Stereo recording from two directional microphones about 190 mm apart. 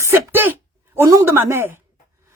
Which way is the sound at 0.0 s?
10° right (ahead or behind).